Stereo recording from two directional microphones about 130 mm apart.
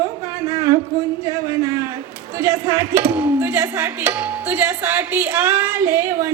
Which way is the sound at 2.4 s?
25° right (ahead or behind).